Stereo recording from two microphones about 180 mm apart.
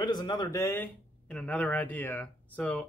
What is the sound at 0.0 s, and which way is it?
Speech, 25° left (ahead or behind).